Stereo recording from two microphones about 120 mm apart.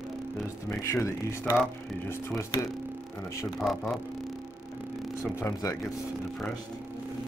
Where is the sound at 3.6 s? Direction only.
Centre (ahead or behind).